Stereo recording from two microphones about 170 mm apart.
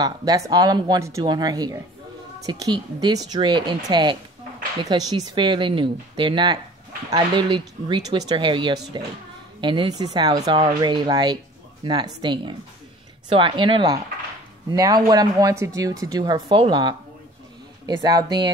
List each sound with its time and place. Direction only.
0.0 s speech: 20° right (ahead or behind)